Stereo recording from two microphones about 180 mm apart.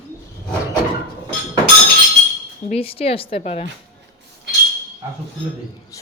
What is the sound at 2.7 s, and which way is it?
Speech, 30° left (ahead or behind).